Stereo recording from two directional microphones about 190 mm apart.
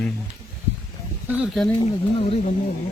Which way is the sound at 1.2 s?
5° right (ahead or behind).